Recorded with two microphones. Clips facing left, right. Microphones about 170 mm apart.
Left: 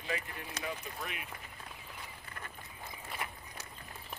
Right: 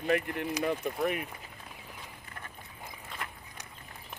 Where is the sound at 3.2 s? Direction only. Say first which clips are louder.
Even; 5° left (ahead or behind).